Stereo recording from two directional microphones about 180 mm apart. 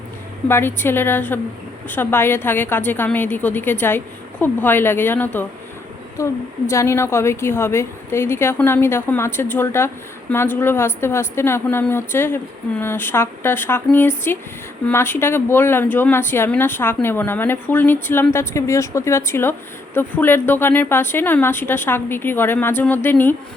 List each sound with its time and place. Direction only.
0.4 s a woman's voice: 10° left (ahead or behind)